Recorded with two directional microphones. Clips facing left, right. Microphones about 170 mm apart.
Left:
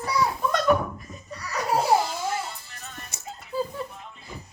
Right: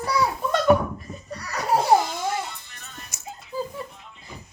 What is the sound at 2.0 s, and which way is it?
Music, 35° left (ahead or behind).